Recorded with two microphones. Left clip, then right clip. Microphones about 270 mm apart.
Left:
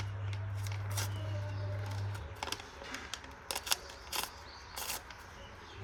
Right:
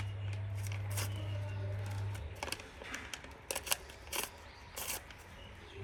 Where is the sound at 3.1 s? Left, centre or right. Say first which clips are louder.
Left 2 dB; centre.